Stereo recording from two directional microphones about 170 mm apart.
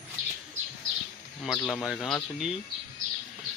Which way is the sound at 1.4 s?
Centre (ahead or behind).